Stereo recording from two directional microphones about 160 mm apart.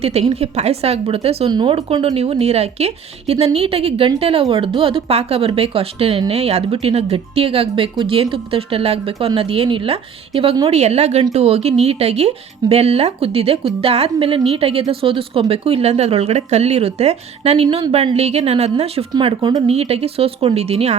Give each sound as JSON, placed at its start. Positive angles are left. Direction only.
{"t": 0.0, "sound": "speech", "side_deg": -40}
{"t": 19.7, "sound": "speech", "side_deg": -40}